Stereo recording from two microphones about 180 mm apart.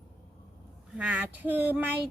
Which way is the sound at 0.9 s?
5° right (ahead or behind).